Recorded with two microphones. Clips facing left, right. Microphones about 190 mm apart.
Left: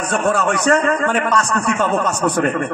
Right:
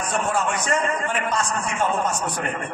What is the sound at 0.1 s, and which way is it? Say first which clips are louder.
A man's voice: left 7 dB; 70° left (ahead or behind).